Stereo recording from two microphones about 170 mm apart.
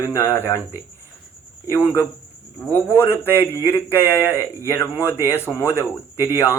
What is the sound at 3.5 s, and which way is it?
Speech, 15° left (ahead or behind).